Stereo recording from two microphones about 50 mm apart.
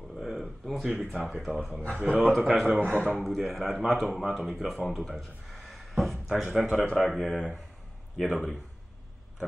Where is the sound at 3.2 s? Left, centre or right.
Centre.